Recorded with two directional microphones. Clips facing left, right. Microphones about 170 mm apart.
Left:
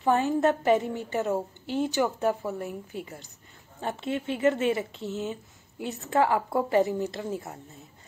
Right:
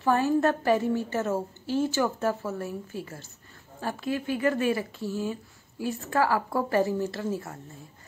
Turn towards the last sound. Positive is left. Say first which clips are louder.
# right 2 dB
turn(degrees=20)  # may be behind; listen again after turning